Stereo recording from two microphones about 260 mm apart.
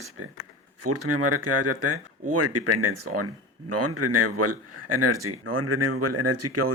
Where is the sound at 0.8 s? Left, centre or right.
Right.